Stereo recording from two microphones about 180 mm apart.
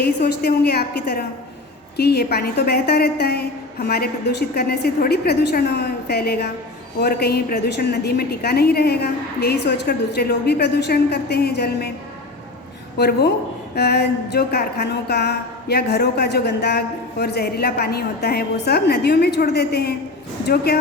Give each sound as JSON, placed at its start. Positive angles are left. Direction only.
{"t": 0.0, "sound": "a woman's voice", "side_deg": 65}
{"t": 13.0, "sound": "a woman's voice", "side_deg": 65}